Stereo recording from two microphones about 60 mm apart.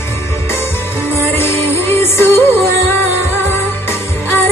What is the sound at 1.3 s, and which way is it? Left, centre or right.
Music, left.